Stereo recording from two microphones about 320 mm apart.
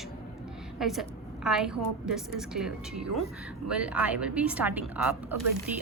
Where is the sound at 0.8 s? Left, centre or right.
Centre.